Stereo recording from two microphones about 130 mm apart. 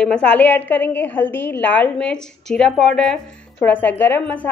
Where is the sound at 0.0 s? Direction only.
10° left (ahead or behind).